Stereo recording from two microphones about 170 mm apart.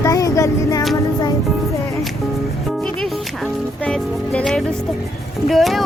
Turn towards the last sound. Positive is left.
turn(degrees=0)  # may be behind; listen again after turning